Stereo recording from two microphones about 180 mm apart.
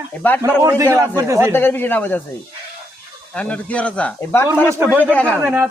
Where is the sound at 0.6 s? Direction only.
15° right (ahead or behind).